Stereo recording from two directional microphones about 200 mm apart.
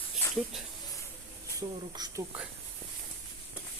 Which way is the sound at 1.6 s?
20° right (ahead or behind).